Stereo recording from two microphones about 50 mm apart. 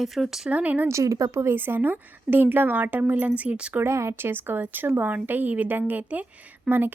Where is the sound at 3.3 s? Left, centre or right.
Right.